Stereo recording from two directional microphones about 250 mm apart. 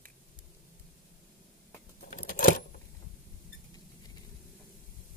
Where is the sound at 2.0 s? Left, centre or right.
Left.